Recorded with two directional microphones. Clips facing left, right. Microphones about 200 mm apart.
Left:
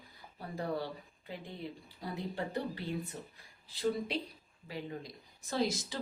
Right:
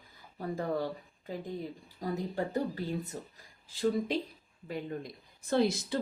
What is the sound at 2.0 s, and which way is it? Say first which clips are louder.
Speech: right 5 dB; 40° right (ahead or behind).